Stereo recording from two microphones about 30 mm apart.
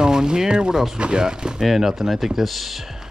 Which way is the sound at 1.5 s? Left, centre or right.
Centre.